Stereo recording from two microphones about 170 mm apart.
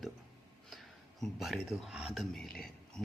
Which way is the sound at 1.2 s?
Centre (ahead or behind).